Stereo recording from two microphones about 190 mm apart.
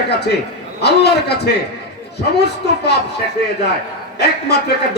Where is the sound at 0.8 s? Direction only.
60° left (ahead or behind).